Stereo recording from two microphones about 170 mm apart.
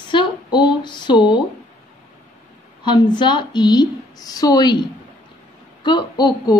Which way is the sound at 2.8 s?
25° left (ahead or behind).